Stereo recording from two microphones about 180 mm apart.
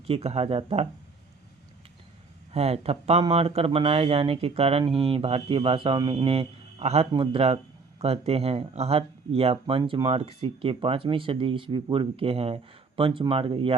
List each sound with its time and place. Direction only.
0.1 s speech: 35° right (ahead or behind)
2.5 s speech: 35° right (ahead or behind)